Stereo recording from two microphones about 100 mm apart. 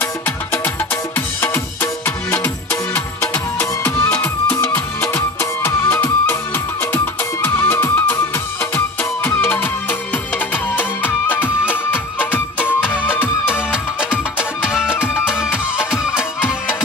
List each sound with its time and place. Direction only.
1.1 s music: 20° left (ahead or behind)
14.1 s music: 5° right (ahead or behind)
15.0 s music: 20° left (ahead or behind)